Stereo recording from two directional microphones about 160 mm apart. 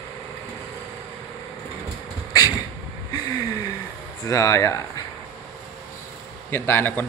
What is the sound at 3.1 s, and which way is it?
Gasp, 25° left (ahead or behind).